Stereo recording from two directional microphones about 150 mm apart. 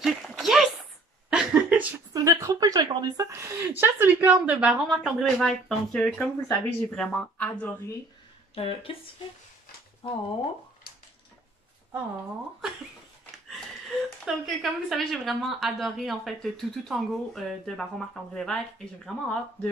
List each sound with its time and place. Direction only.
0.0 s a sound: centre (ahead or behind)
2.1 s a sound: 25° right (ahead or behind)
3.3 s speech: 15° right (ahead or behind); by 7.5 s 10° left (ahead or behind)
8.5 s speech: 40° left (ahead or behind)
10.0 s speech: 35° left (ahead or behind)
14.2 s speech: centre (ahead or behind)